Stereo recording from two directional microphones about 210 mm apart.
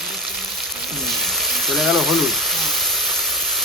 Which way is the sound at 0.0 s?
Centre (ahead or behind).